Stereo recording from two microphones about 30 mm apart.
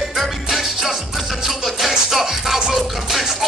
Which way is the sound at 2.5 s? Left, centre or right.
Centre.